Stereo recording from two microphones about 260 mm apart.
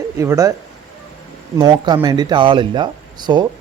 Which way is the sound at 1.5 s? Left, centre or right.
Centre.